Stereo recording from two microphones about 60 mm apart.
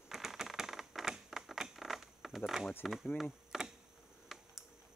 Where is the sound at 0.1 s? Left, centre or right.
Centre.